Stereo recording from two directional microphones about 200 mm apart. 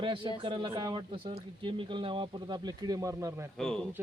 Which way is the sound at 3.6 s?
5° left (ahead or behind).